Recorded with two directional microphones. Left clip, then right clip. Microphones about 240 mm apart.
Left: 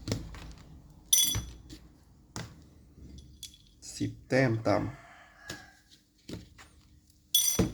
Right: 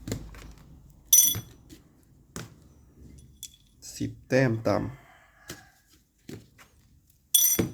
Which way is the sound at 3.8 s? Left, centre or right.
Centre.